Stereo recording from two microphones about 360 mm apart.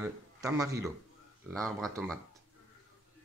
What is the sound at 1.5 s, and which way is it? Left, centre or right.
Speech, centre.